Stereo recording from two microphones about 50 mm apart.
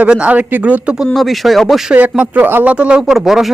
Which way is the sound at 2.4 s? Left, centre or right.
Right.